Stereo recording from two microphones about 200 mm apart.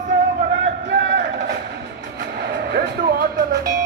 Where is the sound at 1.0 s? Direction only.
60° right (ahead or behind).